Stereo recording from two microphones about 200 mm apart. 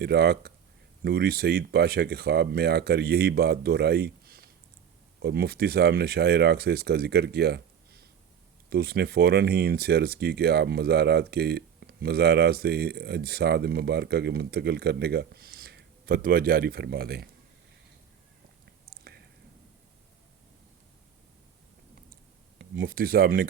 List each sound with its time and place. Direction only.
0.0 s speech: 55° right (ahead or behind)
18.9 s whispering: 50° right (ahead or behind)
22.8 s speech: 45° right (ahead or behind)